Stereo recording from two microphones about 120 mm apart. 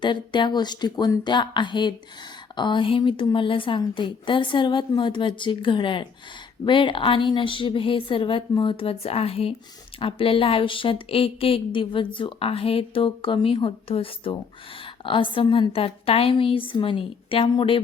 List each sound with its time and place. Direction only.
0.0 s a woman's voice: 40° left (ahead or behind)